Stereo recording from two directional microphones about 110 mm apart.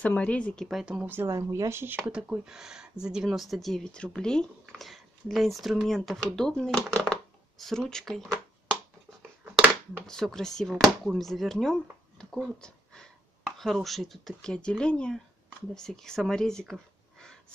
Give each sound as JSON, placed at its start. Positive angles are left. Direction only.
{"t": 0.0, "sound": "speech", "side_deg": 10}
{"t": 0.7, "sound": "speech", "side_deg": -5}
{"t": 1.0, "sound": "speech", "side_deg": -20}
{"t": 2.0, "sound": "speech", "side_deg": -10}
{"t": 9.9, "sound": "speech", "side_deg": 5}